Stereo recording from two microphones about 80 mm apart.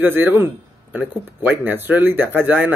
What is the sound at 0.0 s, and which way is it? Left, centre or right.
A man's voice, right.